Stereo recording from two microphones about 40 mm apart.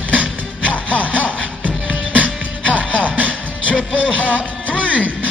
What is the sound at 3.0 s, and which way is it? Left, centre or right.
Music, right.